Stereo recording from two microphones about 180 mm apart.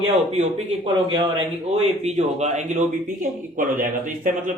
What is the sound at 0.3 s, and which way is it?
Speech, 40° right (ahead or behind).